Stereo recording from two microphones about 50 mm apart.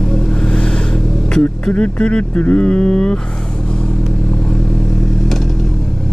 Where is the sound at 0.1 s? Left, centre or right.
Centre.